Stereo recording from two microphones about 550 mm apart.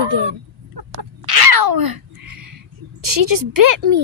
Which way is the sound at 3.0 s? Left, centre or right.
Right.